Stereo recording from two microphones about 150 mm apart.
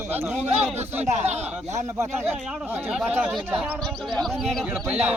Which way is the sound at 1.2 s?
50° right (ahead or behind).